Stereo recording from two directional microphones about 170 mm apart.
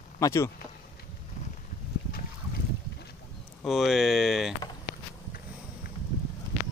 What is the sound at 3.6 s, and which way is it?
Speech, centre (ahead or behind).